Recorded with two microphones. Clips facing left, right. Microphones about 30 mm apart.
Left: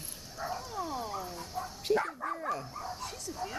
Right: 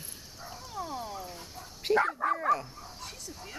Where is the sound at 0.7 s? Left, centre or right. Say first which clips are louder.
Left 1 dB; centre.